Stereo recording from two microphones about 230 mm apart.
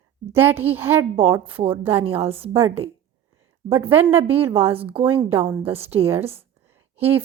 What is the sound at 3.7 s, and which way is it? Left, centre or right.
Speech, centre.